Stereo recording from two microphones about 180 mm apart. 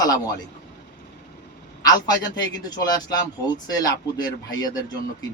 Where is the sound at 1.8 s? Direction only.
20° left (ahead or behind).